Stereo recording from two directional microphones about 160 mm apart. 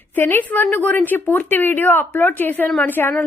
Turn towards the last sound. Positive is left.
turn(degrees=10)  # may be behind; listen again after turning